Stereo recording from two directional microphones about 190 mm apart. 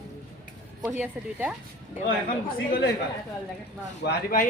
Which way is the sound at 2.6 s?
55° left (ahead or behind).